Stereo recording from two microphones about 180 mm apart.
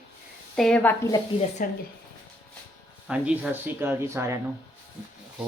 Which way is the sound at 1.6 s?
50° left (ahead or behind).